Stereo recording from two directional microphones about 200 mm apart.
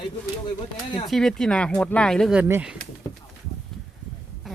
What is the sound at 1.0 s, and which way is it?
Speech, centre (ahead or behind).